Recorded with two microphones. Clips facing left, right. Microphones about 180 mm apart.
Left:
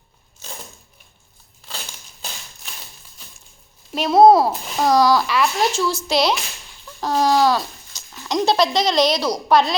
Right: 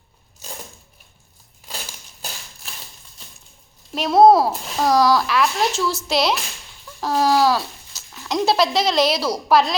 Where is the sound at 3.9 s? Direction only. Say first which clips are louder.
Left 1 dB; centre (ahead or behind).